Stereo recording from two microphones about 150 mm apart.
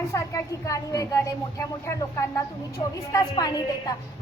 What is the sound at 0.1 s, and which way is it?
Speech, 20° left (ahead or behind).